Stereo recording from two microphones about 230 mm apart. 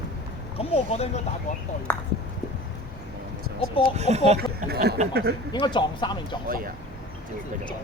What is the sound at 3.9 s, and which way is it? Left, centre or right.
Speech, right.